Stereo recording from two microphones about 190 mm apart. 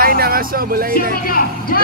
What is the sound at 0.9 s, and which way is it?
Speech, 50° left (ahead or behind).